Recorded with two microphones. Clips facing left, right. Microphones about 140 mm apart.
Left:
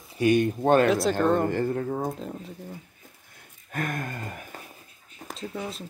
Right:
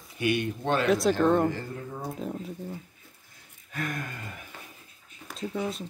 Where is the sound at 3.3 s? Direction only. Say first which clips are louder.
Left 4 dB; 50° left (ahead or behind).